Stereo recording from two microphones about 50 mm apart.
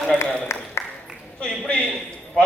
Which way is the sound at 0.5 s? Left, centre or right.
Left.